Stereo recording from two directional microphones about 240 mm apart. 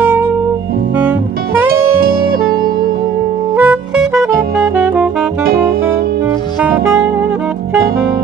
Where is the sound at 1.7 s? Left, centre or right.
Right.